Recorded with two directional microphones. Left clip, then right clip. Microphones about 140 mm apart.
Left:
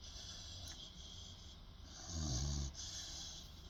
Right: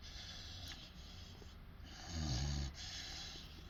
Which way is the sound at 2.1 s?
40° left (ahead or behind).